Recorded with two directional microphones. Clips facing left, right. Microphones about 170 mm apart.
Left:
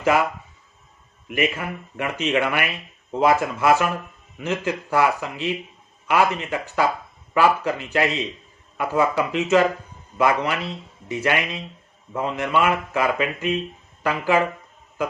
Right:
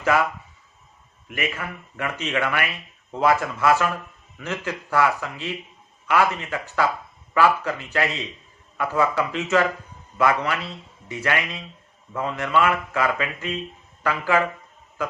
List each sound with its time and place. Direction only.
1.3 s speech: 20° left (ahead or behind)